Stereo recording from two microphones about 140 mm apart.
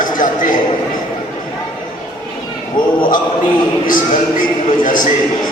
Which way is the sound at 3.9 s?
70° left (ahead or behind).